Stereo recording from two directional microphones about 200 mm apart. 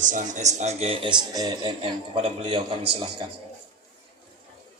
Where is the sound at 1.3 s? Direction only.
20° right (ahead or behind).